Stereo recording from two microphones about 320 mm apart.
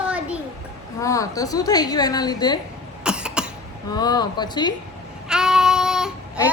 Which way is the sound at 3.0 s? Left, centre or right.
Centre.